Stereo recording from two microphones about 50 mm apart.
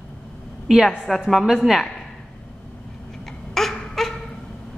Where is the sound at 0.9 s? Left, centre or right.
Centre.